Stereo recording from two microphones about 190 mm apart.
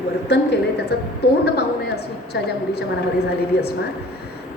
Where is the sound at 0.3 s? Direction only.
65° left (ahead or behind).